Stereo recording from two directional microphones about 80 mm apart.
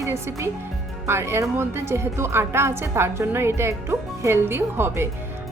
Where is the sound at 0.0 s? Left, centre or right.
Right.